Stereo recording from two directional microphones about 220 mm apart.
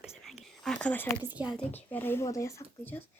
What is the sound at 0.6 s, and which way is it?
Speech, 5° left (ahead or behind).